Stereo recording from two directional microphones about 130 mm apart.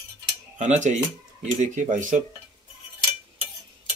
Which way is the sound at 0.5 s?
70° right (ahead or behind).